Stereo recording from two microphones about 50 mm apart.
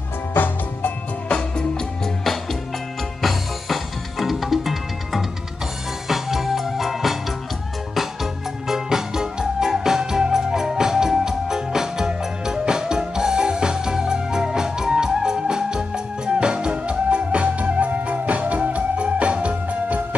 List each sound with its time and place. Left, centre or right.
0.3 s music: left
1.3 s music: centre
3.2 s music: centre; by 20.2 s right